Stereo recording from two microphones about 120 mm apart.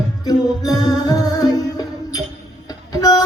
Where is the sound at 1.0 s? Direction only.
30° left (ahead or behind).